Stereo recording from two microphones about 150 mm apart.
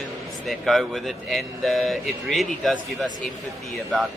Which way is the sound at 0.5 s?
Centre (ahead or behind).